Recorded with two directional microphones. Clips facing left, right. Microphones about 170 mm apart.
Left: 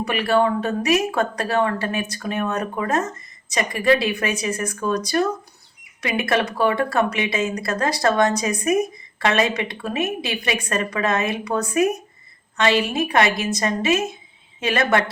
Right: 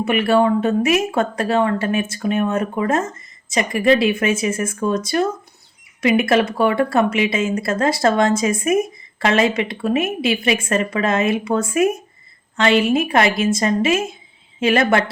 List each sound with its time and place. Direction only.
0.0 s speech: 25° right (ahead or behind)